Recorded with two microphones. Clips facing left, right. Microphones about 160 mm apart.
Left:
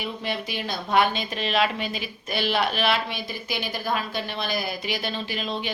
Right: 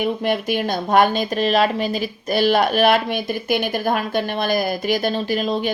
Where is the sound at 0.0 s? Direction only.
55° right (ahead or behind).